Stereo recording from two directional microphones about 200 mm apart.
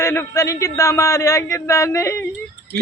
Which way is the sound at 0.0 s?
15° left (ahead or behind).